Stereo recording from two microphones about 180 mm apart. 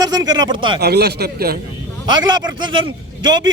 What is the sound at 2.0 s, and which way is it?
A man's voice, 25° right (ahead or behind).